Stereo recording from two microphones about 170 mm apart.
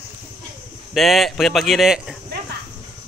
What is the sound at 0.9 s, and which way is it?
Speech, centre (ahead or behind).